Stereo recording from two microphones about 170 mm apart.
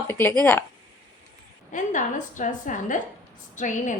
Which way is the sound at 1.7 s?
50° left (ahead or behind).